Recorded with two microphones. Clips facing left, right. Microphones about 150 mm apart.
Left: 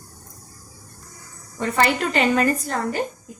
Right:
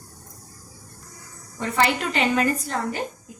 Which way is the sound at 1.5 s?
50° left (ahead or behind).